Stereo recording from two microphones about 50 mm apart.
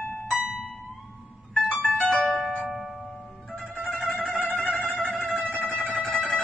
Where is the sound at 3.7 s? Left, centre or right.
Centre.